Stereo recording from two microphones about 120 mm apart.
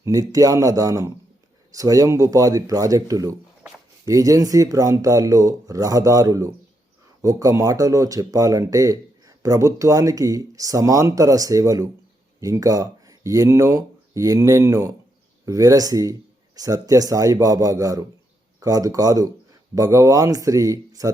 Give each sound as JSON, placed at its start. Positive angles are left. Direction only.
{"t": 0.0, "sound": "speech", "side_deg": -30}